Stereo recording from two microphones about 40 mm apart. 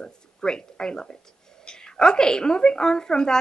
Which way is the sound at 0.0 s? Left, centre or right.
Centre.